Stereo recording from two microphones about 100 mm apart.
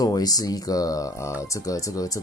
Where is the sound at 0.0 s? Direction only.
40° left (ahead or behind).